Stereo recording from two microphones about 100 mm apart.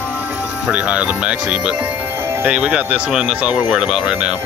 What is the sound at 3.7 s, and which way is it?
Speech, centre (ahead or behind).